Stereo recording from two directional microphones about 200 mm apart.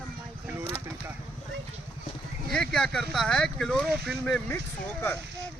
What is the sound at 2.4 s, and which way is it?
Speech, 5° left (ahead or behind).